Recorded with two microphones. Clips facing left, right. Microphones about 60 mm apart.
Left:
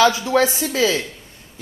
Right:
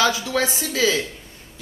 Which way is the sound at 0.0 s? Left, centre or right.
Left.